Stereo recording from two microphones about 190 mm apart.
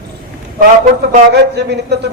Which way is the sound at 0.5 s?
50° right (ahead or behind).